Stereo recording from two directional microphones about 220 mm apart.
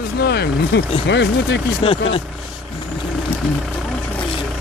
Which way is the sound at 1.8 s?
25° left (ahead or behind).